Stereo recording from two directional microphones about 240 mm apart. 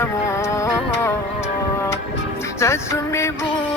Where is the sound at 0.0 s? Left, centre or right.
Centre.